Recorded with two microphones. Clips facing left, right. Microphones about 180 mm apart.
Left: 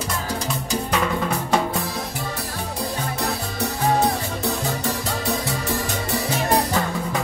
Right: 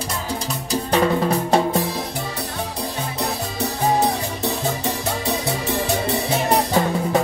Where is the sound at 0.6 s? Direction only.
35° right (ahead or behind).